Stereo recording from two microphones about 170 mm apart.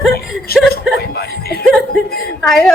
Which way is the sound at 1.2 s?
65° left (ahead or behind).